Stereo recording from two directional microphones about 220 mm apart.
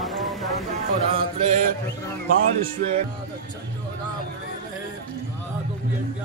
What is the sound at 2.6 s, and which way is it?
Music, 30° right (ahead or behind).